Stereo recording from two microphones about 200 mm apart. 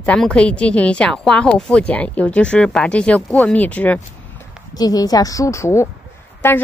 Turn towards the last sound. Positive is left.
turn(degrees=10)  # may be behind; listen again after turning